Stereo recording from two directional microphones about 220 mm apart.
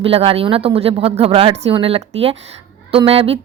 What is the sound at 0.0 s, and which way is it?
Speech, 25° right (ahead or behind).